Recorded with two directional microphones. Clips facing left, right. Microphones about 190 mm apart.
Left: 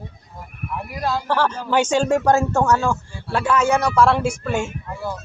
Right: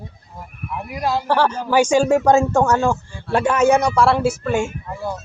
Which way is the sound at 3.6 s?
15° right (ahead or behind).